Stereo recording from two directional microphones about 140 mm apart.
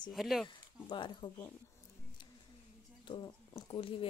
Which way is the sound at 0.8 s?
35° left (ahead or behind).